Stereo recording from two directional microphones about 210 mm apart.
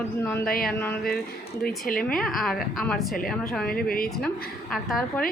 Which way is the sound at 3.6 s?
45° left (ahead or behind).